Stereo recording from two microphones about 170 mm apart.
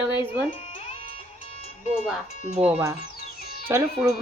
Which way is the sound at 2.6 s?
10° right (ahead or behind).